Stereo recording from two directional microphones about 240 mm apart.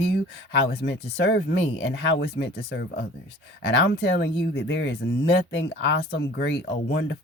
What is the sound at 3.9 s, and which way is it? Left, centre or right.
Speech, left.